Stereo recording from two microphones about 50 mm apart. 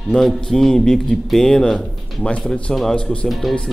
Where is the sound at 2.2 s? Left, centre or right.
Left.